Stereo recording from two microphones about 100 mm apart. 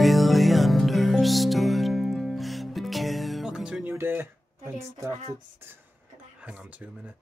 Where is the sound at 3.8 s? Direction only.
20° right (ahead or behind).